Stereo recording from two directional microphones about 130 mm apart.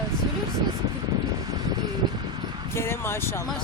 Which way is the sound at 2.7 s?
20° left (ahead or behind).